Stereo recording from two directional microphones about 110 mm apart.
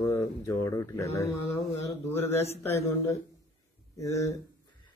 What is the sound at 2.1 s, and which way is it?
Speech, 20° left (ahead or behind).